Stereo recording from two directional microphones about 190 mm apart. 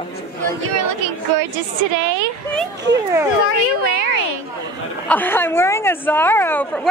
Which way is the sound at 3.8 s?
55° right (ahead or behind).